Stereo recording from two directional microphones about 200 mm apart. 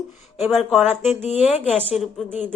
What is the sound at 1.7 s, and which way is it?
Speech, 30° left (ahead or behind).